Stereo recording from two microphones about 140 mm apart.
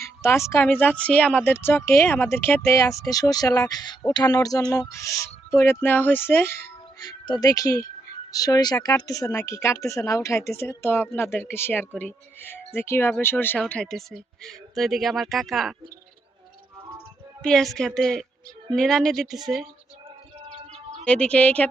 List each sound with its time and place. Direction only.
0.0 s speech: 20° left (ahead or behind); by 15.7 s centre (ahead or behind)
17.4 s speech: 5° left (ahead or behind)
21.0 s speech: 10° left (ahead or behind)